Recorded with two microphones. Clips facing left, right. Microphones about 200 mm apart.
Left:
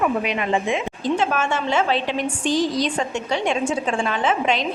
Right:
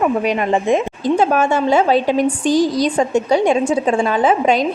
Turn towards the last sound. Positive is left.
turn(degrees=-40)  # may be behind; listen again after turning